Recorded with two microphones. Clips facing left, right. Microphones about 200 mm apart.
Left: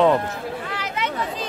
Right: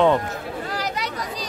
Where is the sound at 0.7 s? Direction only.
40° right (ahead or behind).